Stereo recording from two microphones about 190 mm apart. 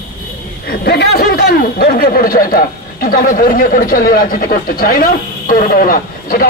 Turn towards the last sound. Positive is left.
turn(degrees=50)  # may be behind; listen again after turning